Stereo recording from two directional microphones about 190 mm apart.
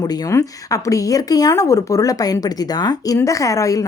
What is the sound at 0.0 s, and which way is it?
Speech, 20° left (ahead or behind).